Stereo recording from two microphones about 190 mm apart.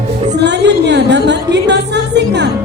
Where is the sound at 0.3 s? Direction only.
65° right (ahead or behind).